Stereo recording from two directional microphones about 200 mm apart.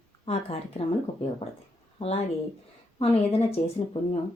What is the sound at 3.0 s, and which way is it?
Speech, 30° left (ahead or behind).